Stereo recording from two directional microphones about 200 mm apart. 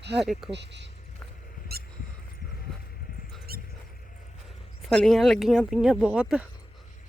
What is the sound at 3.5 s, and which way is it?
Mouse, 50° right (ahead or behind).